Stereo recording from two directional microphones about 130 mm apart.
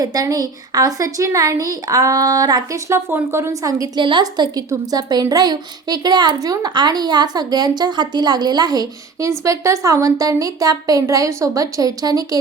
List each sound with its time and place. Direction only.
0.0 s a woman's voice: 30° right (ahead or behind)
3.1 s a woman's voice: 20° right (ahead or behind)